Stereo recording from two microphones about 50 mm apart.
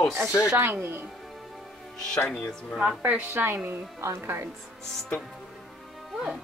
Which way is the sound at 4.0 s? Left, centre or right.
Right.